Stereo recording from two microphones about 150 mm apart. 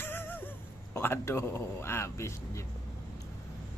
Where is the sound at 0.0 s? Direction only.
15° left (ahead or behind).